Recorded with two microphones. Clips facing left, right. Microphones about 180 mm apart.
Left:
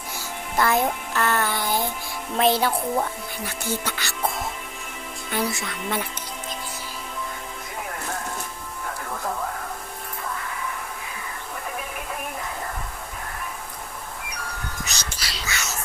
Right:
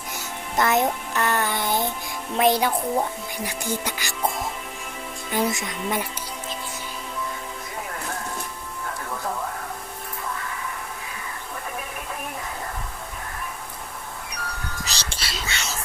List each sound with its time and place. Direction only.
0.5 s music: 20° right (ahead or behind)
2.3 s speech: 15° right (ahead or behind)
5.3 s speech: 20° right (ahead or behind)
14.8 s a sound: 30° right (ahead or behind)